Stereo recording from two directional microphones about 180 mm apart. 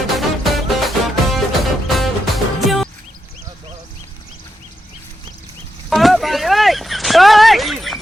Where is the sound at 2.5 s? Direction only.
Centre (ahead or behind).